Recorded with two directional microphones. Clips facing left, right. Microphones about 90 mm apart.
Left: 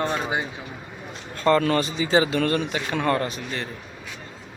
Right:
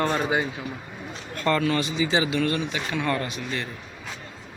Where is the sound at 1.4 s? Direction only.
35° left (ahead or behind).